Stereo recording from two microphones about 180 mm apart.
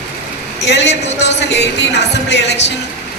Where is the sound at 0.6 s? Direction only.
75° left (ahead or behind).